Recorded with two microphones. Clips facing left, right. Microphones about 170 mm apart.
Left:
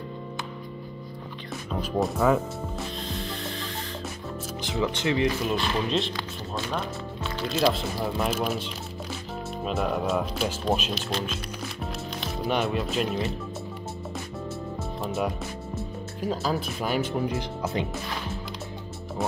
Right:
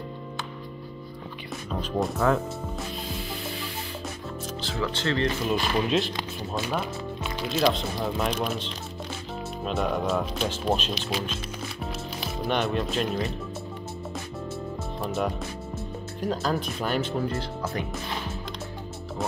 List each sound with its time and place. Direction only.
1.7 s speech: 5° left (ahead or behind)
3.1 s music: 5° right (ahead or behind)
4.6 s speech: 15° left (ahead or behind)
5.5 s speech: 5° right (ahead or behind)
6.1 s speech: 15° right (ahead or behind)
6.8 s music: 15° right (ahead or behind)
7.4 s speech: centre (ahead or behind)
11.8 s music: centre (ahead or behind)
15.0 s music: centre (ahead or behind)
16.2 s speech: 5° left (ahead or behind)